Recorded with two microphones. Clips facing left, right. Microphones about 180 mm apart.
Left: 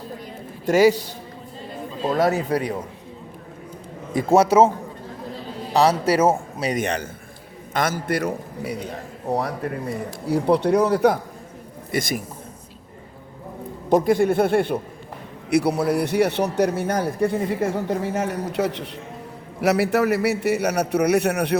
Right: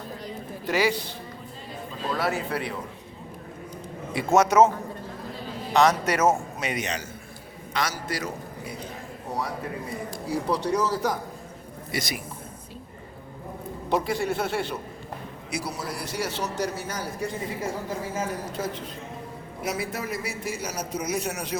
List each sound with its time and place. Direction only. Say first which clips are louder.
0.6 s a man's voice: left 9 dB; 45° left (ahead or behind)
2.0 s a man's voice: left 7 dB; 45° left (ahead or behind)
4.1 s a man's voice: left 4 dB; 40° left (ahead or behind)
5.7 s a man's voice: left 3 dB; 30° left (ahead or behind)
6.8 s a man's voice: left 7 dB; 55° left (ahead or behind)
10.2 s a man's voice: left 8 dB; 65° left (ahead or behind)
11.9 s a man's voice: left 7 dB; 50° left (ahead or behind)
13.9 s a man's voice: left 9 dB; 50° left (ahead or behind)